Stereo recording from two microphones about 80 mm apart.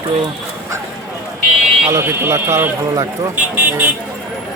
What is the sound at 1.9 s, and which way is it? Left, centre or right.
Speech, right.